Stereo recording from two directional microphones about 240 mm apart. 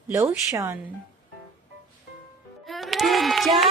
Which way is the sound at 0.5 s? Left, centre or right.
Centre.